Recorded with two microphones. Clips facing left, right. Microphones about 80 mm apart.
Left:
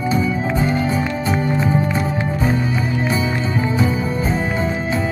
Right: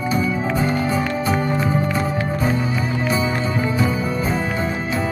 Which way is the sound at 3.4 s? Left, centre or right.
Left.